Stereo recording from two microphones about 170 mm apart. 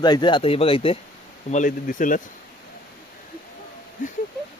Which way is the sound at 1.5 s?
45° left (ahead or behind).